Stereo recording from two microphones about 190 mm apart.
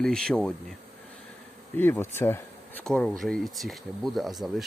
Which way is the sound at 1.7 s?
10° left (ahead or behind).